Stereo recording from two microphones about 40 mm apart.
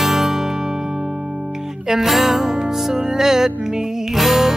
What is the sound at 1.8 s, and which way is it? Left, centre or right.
Music, centre.